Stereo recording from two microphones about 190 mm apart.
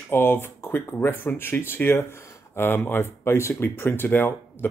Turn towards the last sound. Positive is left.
turn(degrees=10)  # may be behind; listen again after turning